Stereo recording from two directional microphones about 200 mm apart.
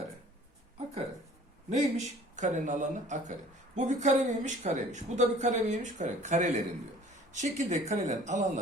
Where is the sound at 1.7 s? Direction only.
35° right (ahead or behind).